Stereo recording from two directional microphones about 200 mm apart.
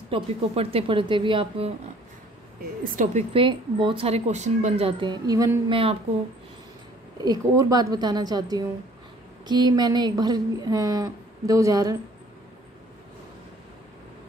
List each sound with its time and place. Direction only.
0.1 s speech: 30° right (ahead or behind)
2.8 s speech: 40° right (ahead or behind)
3.3 s speech: 25° right (ahead or behind)
7.2 s speech: 20° right (ahead or behind)